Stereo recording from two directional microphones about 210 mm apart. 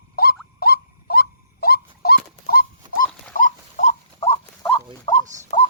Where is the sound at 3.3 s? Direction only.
40° left (ahead or behind).